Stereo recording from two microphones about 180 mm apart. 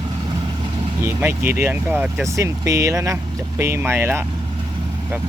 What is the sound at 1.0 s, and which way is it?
Speech, 15° right (ahead or behind).